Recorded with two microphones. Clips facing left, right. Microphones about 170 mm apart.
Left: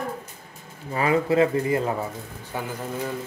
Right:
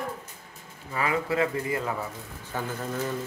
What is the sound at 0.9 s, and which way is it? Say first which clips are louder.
Speech: left 6 dB; 25° left (ahead or behind).